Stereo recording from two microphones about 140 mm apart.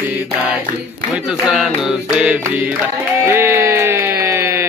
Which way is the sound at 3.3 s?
15° right (ahead or behind).